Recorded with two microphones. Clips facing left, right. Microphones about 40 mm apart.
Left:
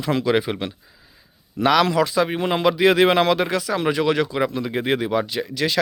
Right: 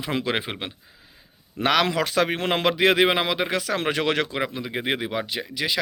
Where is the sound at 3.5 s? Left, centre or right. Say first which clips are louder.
Left 2 dB; right.